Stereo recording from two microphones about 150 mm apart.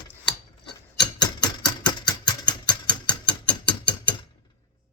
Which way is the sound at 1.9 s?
30° left (ahead or behind).